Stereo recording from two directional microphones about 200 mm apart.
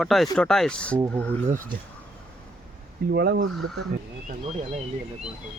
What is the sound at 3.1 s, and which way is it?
Speech, 55° right (ahead or behind).